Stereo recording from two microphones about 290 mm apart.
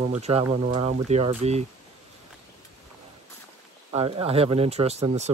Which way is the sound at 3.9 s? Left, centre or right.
Centre.